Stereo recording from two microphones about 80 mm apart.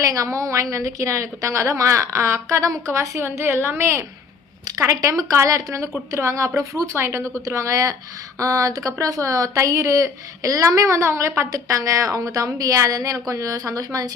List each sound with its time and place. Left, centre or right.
0.0 s a woman's voice: right
4.6 s a woman's voice: right